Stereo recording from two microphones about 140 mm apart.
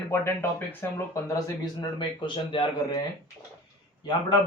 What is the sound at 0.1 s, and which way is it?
Speech, 15° left (ahead or behind).